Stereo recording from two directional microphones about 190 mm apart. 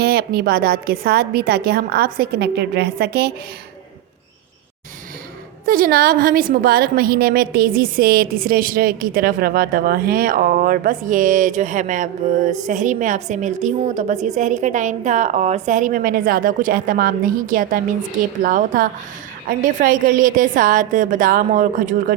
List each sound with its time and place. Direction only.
0.0 s a woman's voice: 55° right (ahead or behind)
5.6 s a woman's voice: 50° right (ahead or behind)